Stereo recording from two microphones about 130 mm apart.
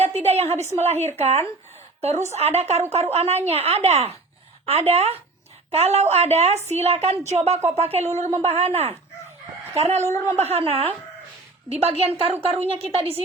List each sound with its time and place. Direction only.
0.0 s a woman's voice: 55° right (ahead or behind)
0.9 s speech: 15° left (ahead or behind)
1.2 s a woman's voice: 55° right (ahead or behind)
10.1 s a woman's voice: 20° left (ahead or behind)
10.4 s speech: 50° right (ahead or behind)